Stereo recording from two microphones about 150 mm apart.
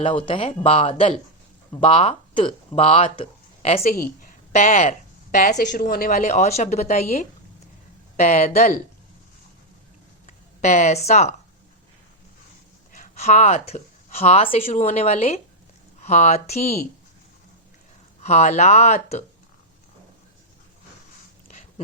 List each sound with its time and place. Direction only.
0.0 s speech: 35° left (ahead or behind)
3.9 s speech: 70° left (ahead or behind)
6.1 s speech: 55° left (ahead or behind)
10.2 s speech: 50° left (ahead or behind)
12.9 s a woman's voice: 50° left (ahead or behind)
18.2 s speech: 50° left (ahead or behind)